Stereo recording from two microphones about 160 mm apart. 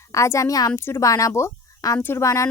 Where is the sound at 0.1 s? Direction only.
20° left (ahead or behind).